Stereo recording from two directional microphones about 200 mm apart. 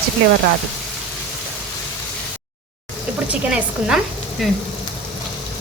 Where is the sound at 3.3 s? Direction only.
5° right (ahead or behind).